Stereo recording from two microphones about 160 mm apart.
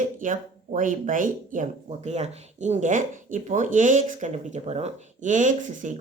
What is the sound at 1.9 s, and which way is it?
Speech, 45° right (ahead or behind).